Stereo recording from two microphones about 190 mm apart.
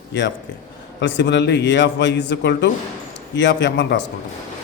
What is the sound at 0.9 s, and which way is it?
A man's voice, 70° left (ahead or behind).